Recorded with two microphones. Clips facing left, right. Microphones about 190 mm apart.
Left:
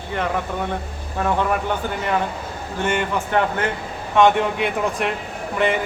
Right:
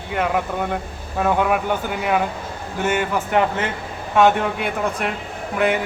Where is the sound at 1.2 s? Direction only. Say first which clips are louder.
Right 2 dB; 10° right (ahead or behind).